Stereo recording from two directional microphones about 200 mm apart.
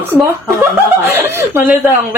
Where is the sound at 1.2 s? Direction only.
10° right (ahead or behind).